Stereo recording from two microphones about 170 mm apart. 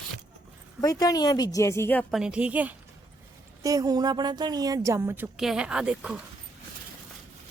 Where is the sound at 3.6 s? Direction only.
20° right (ahead or behind).